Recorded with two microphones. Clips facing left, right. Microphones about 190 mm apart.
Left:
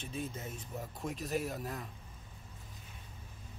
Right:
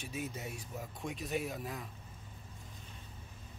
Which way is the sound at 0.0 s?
15° right (ahead or behind).